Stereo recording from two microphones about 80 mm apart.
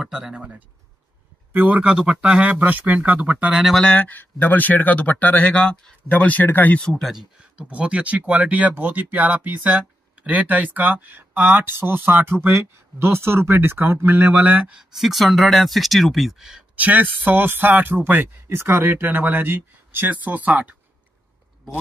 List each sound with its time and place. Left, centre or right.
0.0 s speech: centre
3.5 s speech: centre
3.8 s speech: centre
6.8 s speech: centre
7.6 s speech: centre
14.8 s speech: centre
16.7 s speech: right